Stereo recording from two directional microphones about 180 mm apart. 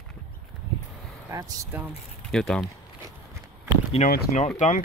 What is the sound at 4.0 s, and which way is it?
Speech, 40° left (ahead or behind).